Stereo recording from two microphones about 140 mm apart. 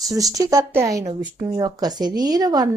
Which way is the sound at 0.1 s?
25° right (ahead or behind).